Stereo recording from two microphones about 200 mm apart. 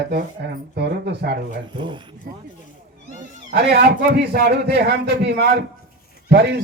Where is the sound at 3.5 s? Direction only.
55° right (ahead or behind).